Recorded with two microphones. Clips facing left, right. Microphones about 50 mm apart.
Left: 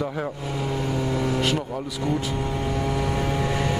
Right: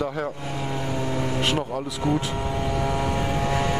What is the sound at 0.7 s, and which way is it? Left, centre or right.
Vehicle, right.